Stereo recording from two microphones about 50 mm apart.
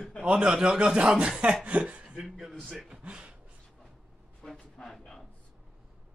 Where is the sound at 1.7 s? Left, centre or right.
Right.